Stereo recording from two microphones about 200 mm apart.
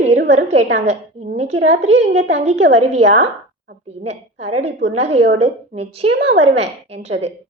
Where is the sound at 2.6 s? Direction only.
70° right (ahead or behind).